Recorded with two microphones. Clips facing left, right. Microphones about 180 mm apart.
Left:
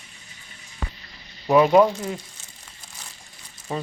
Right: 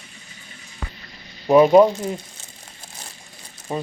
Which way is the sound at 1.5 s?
20° right (ahead or behind).